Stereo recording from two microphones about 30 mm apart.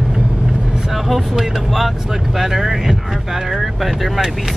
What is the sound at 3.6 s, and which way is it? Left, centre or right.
Speech, centre.